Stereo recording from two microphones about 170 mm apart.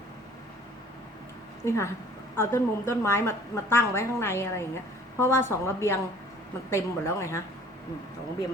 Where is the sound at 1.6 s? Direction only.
15° left (ahead or behind).